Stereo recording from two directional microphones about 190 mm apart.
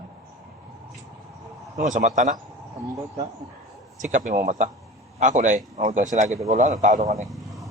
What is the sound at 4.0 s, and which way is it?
A man's voice, 40° right (ahead or behind).